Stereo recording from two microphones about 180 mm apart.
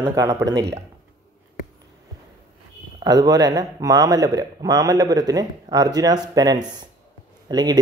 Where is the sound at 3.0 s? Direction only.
20° right (ahead or behind).